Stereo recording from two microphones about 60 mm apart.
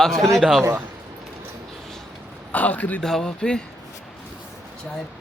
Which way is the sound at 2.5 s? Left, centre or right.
Left.